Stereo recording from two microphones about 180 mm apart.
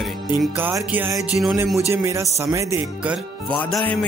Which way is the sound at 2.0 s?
15° right (ahead or behind).